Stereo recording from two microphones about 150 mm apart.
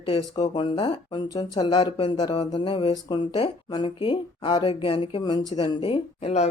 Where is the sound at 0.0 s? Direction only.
35° left (ahead or behind).